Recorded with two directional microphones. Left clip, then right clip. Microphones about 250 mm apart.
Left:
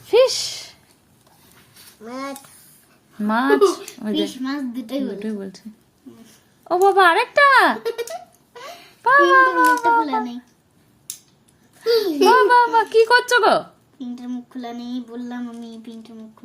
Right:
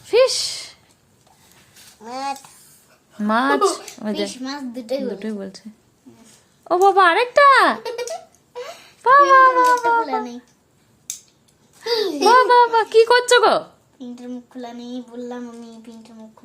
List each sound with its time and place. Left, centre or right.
0.0 s a sound: centre
3.2 s a child's voice: centre
5.2 s a child's voice: centre
6.8 s a child's voice: centre
11.8 s a child's voice: centre